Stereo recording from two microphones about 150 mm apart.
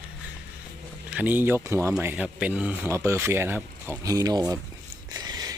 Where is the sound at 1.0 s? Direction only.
10° right (ahead or behind).